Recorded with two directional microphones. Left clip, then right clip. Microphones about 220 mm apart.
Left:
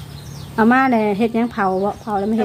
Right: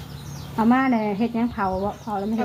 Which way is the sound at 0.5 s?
50° left (ahead or behind).